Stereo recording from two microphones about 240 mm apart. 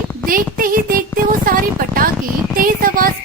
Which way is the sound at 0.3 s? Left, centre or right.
Right.